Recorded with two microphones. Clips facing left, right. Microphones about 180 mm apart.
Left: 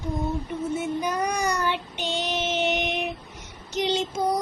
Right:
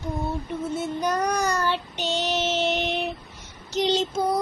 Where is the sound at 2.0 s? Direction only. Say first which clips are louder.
Right 2 dB; 10° left (ahead or behind).